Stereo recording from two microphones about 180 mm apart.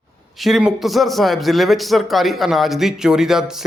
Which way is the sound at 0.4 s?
Centre (ahead or behind).